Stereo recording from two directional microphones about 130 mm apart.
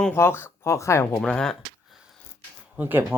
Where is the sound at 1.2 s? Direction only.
5° left (ahead or behind).